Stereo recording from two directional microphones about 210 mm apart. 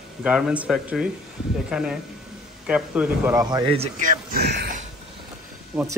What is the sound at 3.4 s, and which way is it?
Speech, 20° right (ahead or behind).